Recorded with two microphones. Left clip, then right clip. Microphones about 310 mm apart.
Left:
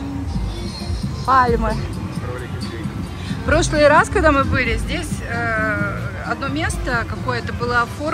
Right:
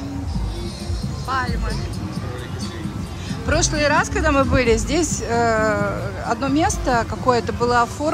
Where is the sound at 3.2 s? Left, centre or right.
Centre.